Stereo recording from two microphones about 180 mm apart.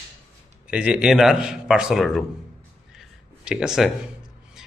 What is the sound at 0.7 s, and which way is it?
Speech, 5° right (ahead or behind).